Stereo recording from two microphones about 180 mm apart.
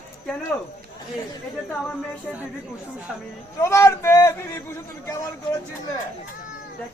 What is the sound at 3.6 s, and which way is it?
A man's voice, 15° left (ahead or behind).